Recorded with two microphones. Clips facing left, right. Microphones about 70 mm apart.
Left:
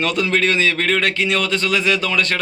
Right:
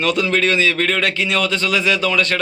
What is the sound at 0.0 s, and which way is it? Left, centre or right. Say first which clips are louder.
A man's voice: right 1 dB; left.